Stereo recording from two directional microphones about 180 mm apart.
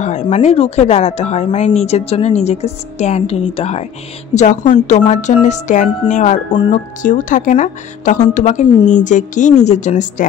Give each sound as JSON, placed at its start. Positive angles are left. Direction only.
{"t": 0.0, "sound": "a woman's voice", "side_deg": 40}